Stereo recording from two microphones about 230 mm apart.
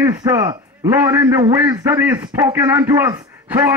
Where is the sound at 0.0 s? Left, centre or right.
Centre.